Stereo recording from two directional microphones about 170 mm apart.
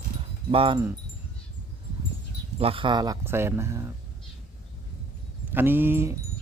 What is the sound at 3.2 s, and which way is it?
Speech, 15° right (ahead or behind).